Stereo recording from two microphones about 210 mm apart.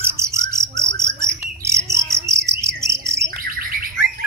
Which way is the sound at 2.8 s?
15° right (ahead or behind).